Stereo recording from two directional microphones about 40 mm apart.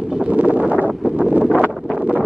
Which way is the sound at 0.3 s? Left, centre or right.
Right.